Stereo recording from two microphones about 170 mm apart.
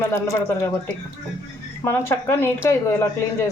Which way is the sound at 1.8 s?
10° left (ahead or behind).